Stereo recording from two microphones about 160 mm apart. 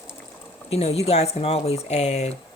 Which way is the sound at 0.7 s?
40° left (ahead or behind).